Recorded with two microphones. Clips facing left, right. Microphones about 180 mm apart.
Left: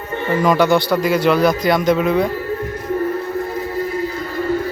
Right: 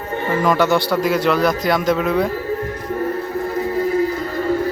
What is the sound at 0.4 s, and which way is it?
A man's voice, centre (ahead or behind).